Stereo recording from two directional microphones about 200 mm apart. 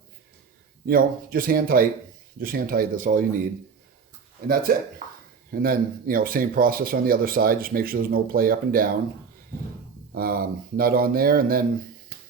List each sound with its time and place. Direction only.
0.9 s speech: 45° right (ahead or behind)
10.2 s speech: 45° right (ahead or behind)